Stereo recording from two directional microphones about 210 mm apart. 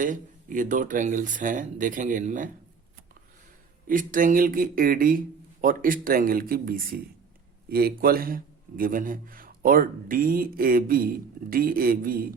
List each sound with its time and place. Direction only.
0.0 s speech: 40° right (ahead or behind)
3.8 s a man's voice: 40° right (ahead or behind)